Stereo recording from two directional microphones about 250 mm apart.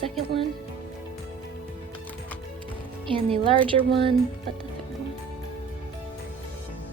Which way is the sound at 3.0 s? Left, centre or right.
Right.